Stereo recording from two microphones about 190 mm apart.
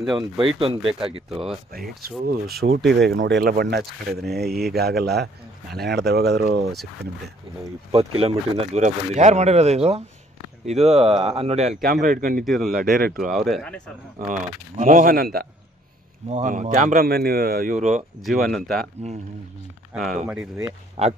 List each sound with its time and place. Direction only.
0.0 s speech: centre (ahead or behind)
0.6 s speech: 30° right (ahead or behind)
1.7 s speech: 50° right (ahead or behind)
7.9 s speech: 30° right (ahead or behind)
11.8 s speech: 50° right (ahead or behind)
12.4 s speech: centre (ahead or behind)
12.9 s speech: 50° right (ahead or behind)
13.2 s speech: centre (ahead or behind)
14.8 s speech: 40° right (ahead or behind)
16.3 s speech: 40° right (ahead or behind)
18.2 s speech: centre (ahead or behind)
19.9 s speech: centre (ahead or behind)
21.0 s speech: 35° right (ahead or behind)